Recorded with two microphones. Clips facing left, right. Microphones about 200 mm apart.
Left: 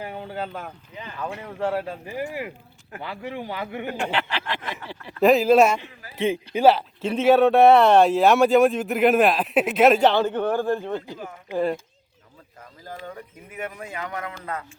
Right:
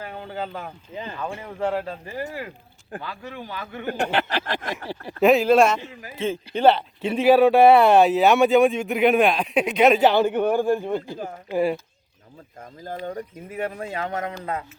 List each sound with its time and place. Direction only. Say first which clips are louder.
0.0 s a sound: left 2 dB; 15° left (ahead or behind)
0.3 s speech: even; centre (ahead or behind); by 3.8 s 20° left (ahead or behind)
3.8 s speech: right 5 dB; 45° right (ahead or behind)
5.2 s speech: even; centre (ahead or behind)
12.9 s speech: right 6 dB; 30° right (ahead or behind)